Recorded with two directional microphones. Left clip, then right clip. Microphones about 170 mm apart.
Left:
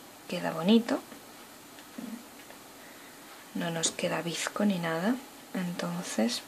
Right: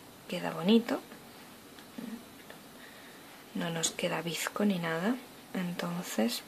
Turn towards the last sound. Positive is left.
turn(degrees=-15)  # may be behind; listen again after turning